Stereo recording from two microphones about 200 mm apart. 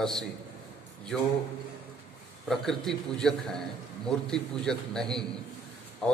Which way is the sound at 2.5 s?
Centre (ahead or behind).